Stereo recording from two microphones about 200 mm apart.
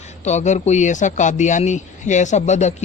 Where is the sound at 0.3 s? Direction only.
35° left (ahead or behind).